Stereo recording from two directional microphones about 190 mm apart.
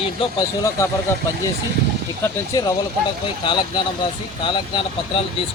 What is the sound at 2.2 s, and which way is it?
A man's voice, 15° left (ahead or behind).